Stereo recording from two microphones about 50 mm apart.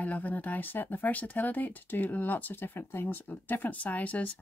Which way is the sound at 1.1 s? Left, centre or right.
Left.